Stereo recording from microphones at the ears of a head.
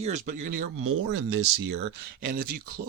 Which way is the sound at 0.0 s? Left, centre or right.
Right.